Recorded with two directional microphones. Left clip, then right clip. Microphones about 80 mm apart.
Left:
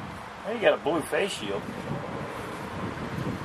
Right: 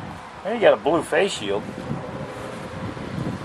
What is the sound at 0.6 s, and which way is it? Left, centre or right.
Speech, right.